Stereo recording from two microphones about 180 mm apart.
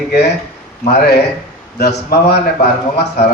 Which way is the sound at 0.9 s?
65° left (ahead or behind).